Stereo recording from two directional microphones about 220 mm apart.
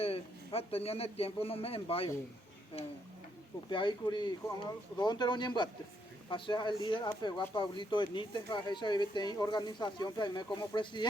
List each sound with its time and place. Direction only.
0.0 s speech: 25° left (ahead or behind)
3.7 s speech: 20° left (ahead or behind)